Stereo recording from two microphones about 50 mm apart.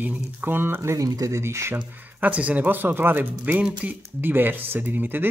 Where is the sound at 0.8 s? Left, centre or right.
Right.